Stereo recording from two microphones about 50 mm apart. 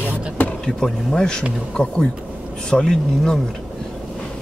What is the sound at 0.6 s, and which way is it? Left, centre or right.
Speech, centre.